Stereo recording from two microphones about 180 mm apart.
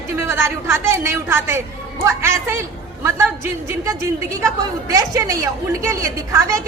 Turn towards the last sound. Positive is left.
turn(degrees=-15)  # may be behind; listen again after turning